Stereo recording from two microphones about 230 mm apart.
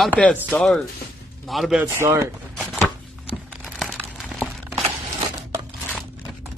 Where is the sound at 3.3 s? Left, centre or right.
Centre.